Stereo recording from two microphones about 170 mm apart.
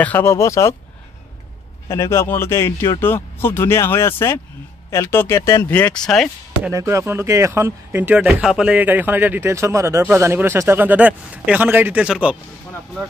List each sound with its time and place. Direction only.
0.0 s speech: 15° left (ahead or behind)
1.9 s speech: 15° left (ahead or behind)
6.7 s a man's voice: 20° right (ahead or behind)